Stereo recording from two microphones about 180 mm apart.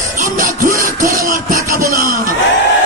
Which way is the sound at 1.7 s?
55° right (ahead or behind).